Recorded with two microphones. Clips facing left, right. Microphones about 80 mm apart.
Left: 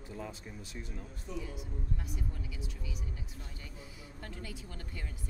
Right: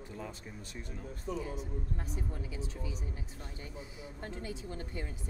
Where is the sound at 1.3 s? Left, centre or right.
Right.